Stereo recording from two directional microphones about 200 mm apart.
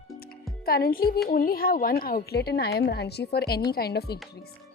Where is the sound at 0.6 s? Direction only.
50° left (ahead or behind).